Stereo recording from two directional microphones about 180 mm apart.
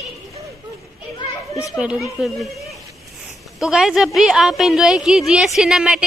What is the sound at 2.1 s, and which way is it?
Speech, centre (ahead or behind).